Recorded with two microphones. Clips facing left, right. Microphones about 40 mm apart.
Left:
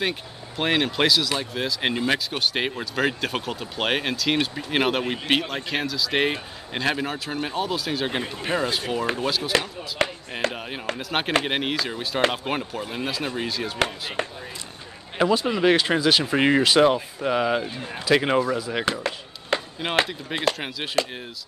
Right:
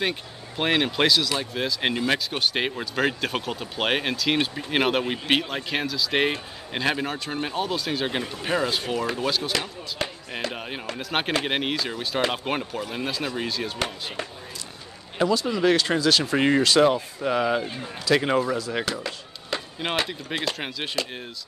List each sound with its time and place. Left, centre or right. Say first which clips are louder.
0.0 s speech: even; centre
8.2 s speech: left 1 dB; centre
8.5 s speech: even; centre
10.0 s speech: left 6 dB; left
10.5 s speech: left 2 dB; centre
14.2 s speech: left 6 dB; left
15.1 s speech: left 2 dB; left; by 17.6 s centre
17.8 s speech: left 1 dB; left
18.1 s speech: left 1 dB; centre
18.9 s chop: left 4 dB; left
19.8 s speech: left 2 dB; centre